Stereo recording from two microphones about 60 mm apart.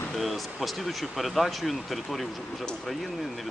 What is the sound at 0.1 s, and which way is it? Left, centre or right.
Speech, centre.